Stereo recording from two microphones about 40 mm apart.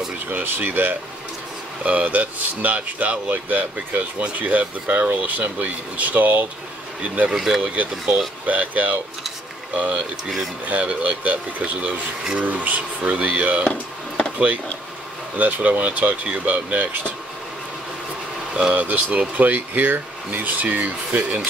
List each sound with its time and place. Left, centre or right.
0.3 s speech: right
1.9 s speech: right
7.3 s speech: centre
7.6 s speech: right
13.7 s a sound: left
15.3 s speech: right
16.7 s speech: right
18.7 s speech: right